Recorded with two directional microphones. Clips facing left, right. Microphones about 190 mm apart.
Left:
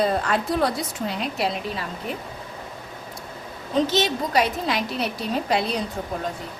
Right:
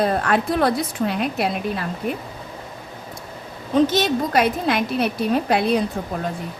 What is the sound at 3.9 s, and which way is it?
A woman's voice, 50° right (ahead or behind).